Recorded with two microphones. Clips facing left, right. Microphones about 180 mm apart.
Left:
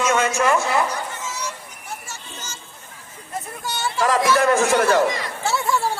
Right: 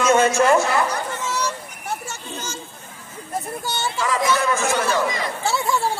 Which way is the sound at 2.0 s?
60° right (ahead or behind).